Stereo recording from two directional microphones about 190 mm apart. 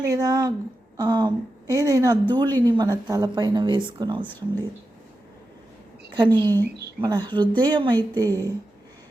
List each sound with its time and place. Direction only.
0.0 s speech: 20° right (ahead or behind)
4.3 s speech: 10° left (ahead or behind)
6.1 s speech: 25° right (ahead or behind)